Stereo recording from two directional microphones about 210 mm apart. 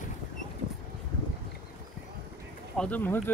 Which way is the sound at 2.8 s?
10° left (ahead or behind).